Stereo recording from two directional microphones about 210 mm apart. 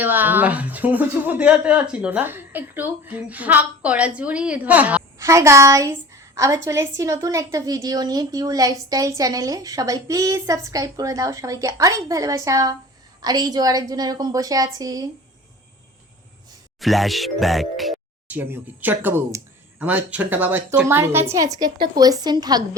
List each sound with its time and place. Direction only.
0.0 s speech: 10° right (ahead or behind)
16.8 s speech: centre (ahead or behind); by 22.6 s 20° right (ahead or behind)